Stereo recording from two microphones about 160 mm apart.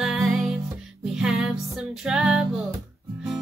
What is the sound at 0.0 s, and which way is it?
Music, 5° right (ahead or behind).